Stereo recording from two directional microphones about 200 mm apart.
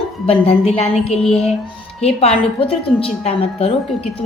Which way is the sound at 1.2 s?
Centre (ahead or behind).